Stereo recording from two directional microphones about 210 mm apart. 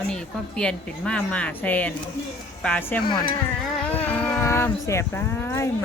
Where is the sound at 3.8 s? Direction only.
10° left (ahead or behind).